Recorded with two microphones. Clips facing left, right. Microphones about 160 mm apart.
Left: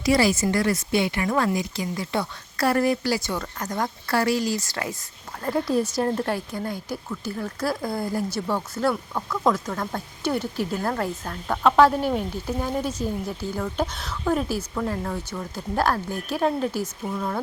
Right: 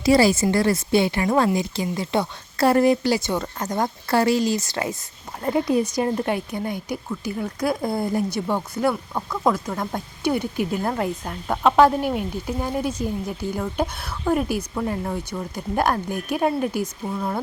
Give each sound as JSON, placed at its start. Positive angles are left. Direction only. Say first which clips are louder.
{"t": 0.0, "sound": "speech", "louder": "right 4 dB", "side_deg": -30}